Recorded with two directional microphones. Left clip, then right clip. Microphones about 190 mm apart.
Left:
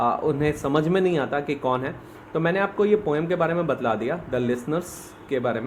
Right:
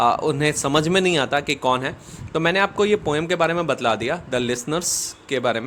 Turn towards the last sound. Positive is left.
turn(degrees=-40)  # may be behind; listen again after turning